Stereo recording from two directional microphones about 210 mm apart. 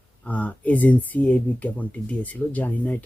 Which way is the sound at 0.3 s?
5° left (ahead or behind).